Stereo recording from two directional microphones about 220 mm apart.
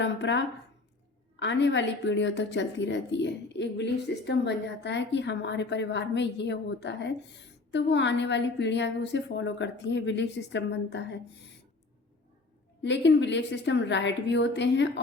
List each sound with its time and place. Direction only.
0.0 s a woman's voice: 55° left (ahead or behind)
12.8 s a woman's voice: 55° left (ahead or behind)